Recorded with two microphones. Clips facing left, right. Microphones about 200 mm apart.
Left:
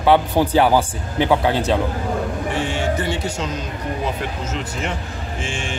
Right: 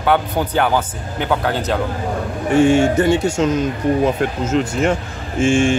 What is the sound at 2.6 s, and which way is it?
Speech, 50° right (ahead or behind).